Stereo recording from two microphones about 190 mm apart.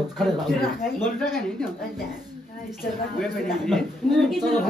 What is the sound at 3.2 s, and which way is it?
Speech, centre (ahead or behind).